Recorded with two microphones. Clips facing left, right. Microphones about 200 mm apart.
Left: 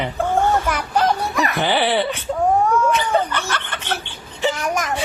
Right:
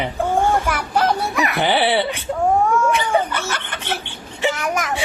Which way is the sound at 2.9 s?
10° right (ahead or behind).